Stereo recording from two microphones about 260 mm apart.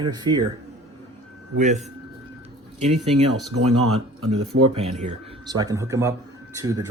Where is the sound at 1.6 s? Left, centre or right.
Right.